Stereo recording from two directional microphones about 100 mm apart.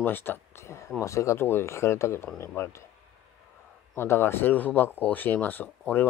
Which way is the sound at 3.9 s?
25° left (ahead or behind).